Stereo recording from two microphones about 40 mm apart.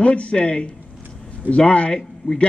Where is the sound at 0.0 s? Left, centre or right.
Left.